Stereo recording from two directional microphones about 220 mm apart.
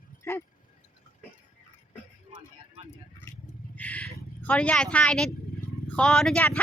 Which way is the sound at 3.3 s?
10° left (ahead or behind).